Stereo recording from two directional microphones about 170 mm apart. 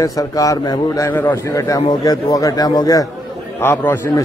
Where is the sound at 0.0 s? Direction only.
20° left (ahead or behind).